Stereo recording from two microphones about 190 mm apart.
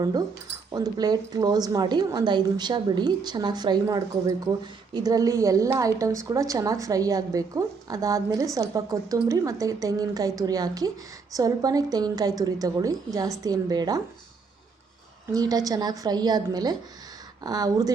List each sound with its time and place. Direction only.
0.0 s a woman's voice: 20° right (ahead or behind)
15.3 s a woman's voice: 20° right (ahead or behind)